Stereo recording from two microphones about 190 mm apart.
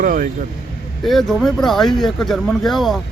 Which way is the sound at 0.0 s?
50° right (ahead or behind).